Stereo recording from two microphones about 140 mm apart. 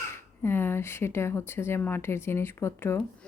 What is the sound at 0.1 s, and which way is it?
Speech, 15° left (ahead or behind).